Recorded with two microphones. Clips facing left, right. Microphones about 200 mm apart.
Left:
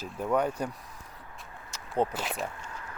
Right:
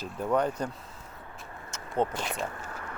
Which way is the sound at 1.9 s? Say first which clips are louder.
Even; 5° left (ahead or behind).